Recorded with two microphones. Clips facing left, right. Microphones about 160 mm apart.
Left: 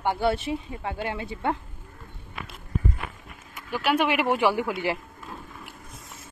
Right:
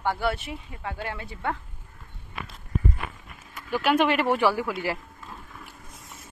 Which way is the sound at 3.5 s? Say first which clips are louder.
Right 2 dB; 10° left (ahead or behind).